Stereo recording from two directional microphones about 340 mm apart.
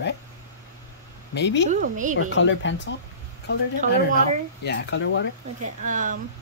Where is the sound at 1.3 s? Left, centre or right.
Left.